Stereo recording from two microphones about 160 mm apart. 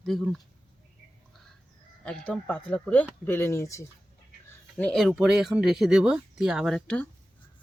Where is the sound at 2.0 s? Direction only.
5° left (ahead or behind).